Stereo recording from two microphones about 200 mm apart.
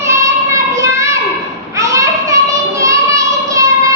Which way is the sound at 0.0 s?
15° right (ahead or behind).